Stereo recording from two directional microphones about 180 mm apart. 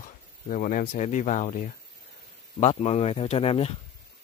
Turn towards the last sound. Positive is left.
turn(degrees=30)  # may be behind; listen again after turning